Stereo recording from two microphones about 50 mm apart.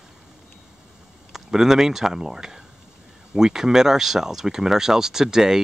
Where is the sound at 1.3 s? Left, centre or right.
Centre.